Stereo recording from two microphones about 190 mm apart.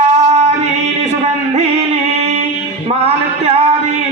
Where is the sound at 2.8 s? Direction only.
35° right (ahead or behind).